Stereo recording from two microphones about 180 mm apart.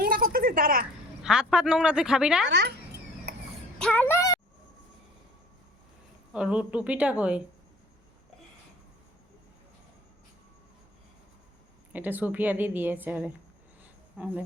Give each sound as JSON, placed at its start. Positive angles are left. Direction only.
{"t": 0.0, "sound": "a sound", "side_deg": -55}
{"t": 1.2, "sound": "speech", "side_deg": -5}
{"t": 2.5, "sound": "speech", "side_deg": -70}
{"t": 3.3, "sound": "a sound", "side_deg": -70}
{"t": 3.8, "sound": "speech", "side_deg": 5}
{"t": 6.3, "sound": "a woman's voice", "side_deg": -5}
{"t": 11.9, "sound": "a woman's voice", "side_deg": -10}